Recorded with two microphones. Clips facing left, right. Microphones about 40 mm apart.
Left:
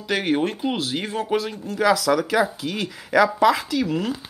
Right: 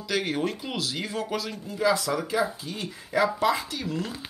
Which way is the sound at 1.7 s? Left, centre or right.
Left.